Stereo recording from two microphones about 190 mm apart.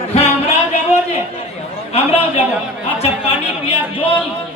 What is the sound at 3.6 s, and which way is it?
Speech, 30° left (ahead or behind).